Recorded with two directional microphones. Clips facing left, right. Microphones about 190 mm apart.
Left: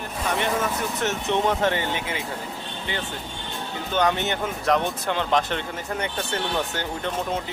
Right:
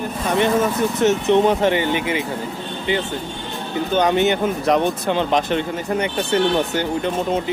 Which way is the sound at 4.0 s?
15° right (ahead or behind).